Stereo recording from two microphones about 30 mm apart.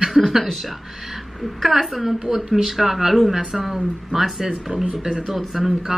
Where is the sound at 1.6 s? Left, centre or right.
Centre.